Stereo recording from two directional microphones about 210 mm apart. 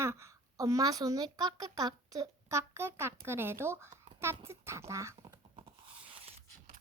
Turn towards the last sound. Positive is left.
turn(degrees=-25)  # may be behind; listen again after turning